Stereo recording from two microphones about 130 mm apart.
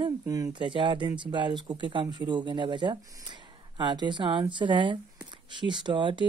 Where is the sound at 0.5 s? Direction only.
40° right (ahead or behind).